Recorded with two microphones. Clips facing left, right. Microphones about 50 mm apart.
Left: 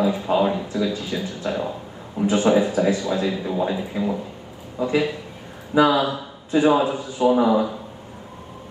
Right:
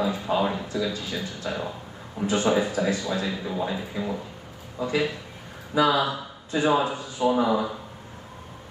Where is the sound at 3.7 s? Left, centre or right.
Centre.